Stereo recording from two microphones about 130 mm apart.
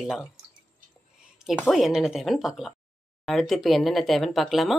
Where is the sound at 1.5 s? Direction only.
Centre (ahead or behind).